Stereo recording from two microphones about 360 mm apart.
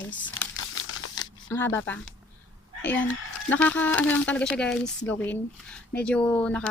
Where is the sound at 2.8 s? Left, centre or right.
Centre.